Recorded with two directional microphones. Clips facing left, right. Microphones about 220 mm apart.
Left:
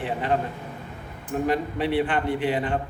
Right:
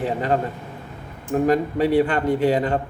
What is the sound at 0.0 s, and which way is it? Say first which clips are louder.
A man's voice: right 4 dB; 40° right (ahead or behind).